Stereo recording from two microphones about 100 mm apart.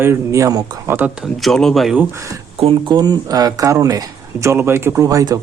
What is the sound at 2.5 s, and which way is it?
Speech, 80° right.